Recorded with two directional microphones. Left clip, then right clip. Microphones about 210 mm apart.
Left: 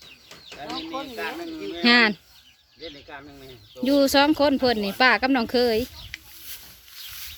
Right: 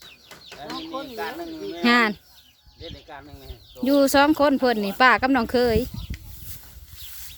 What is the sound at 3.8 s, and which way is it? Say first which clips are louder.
Speech: right 1 dB; 5° right (ahead or behind).